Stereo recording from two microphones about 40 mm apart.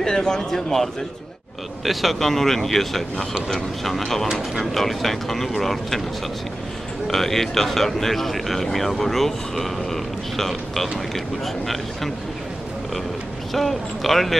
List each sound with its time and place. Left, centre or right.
0.0 s speech: centre
1.9 s a man's voice: centre
7.1 s a man's voice: centre
13.5 s a man's voice: centre